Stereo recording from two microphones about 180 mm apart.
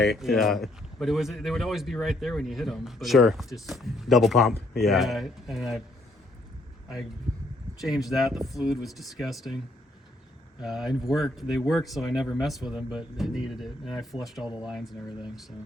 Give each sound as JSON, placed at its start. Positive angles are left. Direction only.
{"t": 0.0, "sound": "speech", "side_deg": 0}
{"t": 7.8, "sound": "speech", "side_deg": 0}
{"t": 10.6, "sound": "speech", "side_deg": 0}